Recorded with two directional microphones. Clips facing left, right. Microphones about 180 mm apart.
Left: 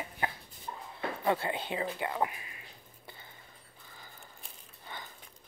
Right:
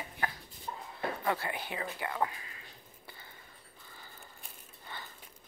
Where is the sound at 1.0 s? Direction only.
20° left (ahead or behind).